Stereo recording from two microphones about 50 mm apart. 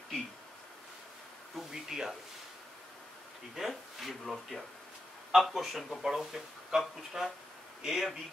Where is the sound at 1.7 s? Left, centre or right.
Centre.